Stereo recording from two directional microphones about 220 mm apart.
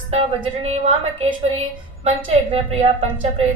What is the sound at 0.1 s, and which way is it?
A woman's voice, 25° right (ahead or behind).